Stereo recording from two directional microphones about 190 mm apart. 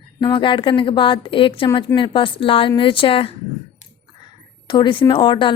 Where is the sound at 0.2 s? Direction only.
25° left (ahead or behind).